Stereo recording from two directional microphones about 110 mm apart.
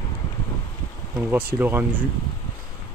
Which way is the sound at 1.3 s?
20° right (ahead or behind).